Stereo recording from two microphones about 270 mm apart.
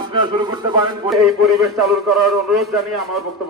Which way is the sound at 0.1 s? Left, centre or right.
Centre.